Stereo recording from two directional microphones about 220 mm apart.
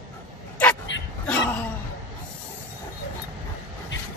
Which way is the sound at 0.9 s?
55° left (ahead or behind).